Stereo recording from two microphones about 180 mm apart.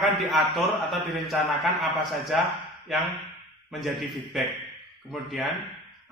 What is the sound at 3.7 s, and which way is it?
A man's voice, centre (ahead or behind).